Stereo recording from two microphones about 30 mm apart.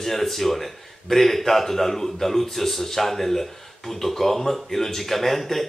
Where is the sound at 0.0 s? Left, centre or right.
Centre.